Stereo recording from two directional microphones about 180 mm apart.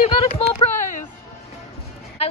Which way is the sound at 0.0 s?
35° left (ahead or behind).